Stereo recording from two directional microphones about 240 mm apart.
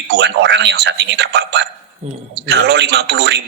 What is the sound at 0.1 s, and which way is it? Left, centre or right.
A man's voice, right.